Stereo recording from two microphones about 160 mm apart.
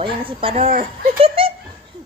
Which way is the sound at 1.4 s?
35° right (ahead or behind).